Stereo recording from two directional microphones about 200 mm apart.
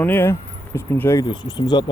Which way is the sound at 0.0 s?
10° left (ahead or behind).